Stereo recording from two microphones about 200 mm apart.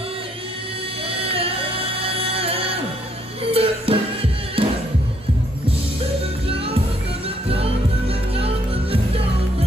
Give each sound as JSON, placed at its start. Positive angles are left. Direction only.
{"t": 1.1, "sound": "music", "side_deg": -30}
{"t": 7.4, "sound": "music", "side_deg": -30}